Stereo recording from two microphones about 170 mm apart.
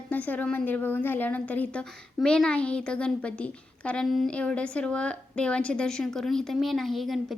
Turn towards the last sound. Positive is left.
turn(degrees=0)  # may be behind; listen again after turning